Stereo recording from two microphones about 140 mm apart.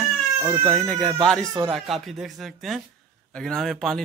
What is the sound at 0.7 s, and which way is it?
Speech, 5° left (ahead or behind).